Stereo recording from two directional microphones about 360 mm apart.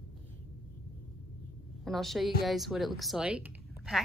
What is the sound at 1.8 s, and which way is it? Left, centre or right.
Speech, centre.